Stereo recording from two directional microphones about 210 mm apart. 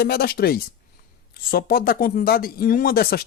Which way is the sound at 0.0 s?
45° left (ahead or behind).